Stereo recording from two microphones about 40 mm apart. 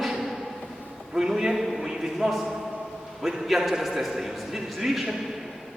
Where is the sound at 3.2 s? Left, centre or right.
Centre.